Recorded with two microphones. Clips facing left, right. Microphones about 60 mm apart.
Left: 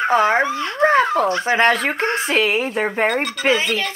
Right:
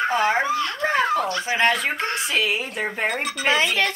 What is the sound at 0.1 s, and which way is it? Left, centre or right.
Speech, left.